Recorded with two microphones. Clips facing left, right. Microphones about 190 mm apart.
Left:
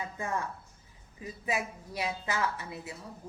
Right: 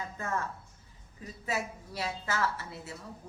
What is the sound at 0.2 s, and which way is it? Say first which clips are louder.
A woman's voice: even; 15° left (ahead or behind).